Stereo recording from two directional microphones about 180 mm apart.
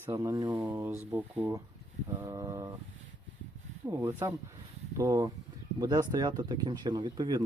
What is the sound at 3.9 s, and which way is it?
Speech, 15° right (ahead or behind).